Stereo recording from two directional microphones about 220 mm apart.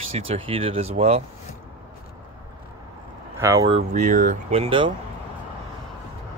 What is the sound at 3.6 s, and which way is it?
Speech, 30° right (ahead or behind).